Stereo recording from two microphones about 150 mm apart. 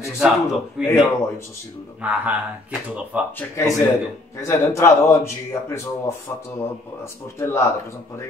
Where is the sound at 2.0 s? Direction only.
10° right (ahead or behind).